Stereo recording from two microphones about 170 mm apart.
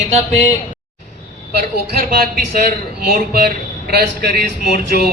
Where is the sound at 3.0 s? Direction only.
65° right (ahead or behind).